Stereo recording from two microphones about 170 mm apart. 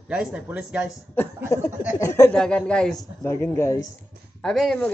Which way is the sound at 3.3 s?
15° left (ahead or behind).